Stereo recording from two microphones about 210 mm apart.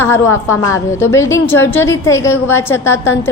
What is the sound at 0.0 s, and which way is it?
A woman's voice, 10° left (ahead or behind).